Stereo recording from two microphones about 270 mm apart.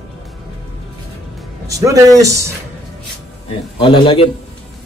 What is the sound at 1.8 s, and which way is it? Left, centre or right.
Speech, centre.